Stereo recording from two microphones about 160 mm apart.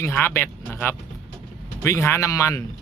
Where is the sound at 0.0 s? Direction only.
15° left (ahead or behind).